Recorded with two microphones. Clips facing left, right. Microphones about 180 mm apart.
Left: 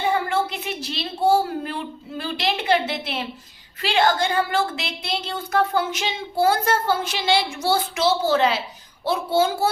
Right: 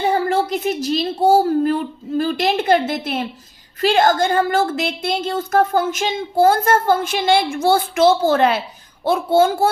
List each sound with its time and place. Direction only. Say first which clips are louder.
0.1 s a woman's voice: right 5 dB; 40° right (ahead or behind)